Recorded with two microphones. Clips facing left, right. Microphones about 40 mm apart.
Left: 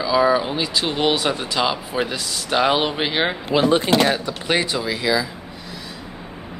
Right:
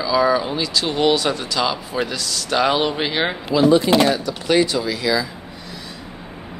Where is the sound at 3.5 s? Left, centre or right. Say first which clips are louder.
Right 3 dB; left.